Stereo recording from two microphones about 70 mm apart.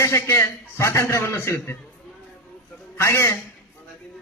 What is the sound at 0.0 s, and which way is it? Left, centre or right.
Speech, left.